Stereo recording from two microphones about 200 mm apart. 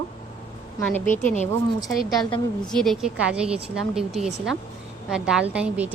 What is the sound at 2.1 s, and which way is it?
Speech, 20° left (ahead or behind).